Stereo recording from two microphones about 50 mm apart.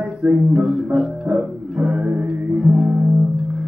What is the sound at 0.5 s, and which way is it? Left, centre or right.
Music, centre.